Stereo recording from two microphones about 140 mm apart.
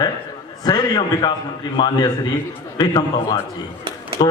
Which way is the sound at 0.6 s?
30° left (ahead or behind).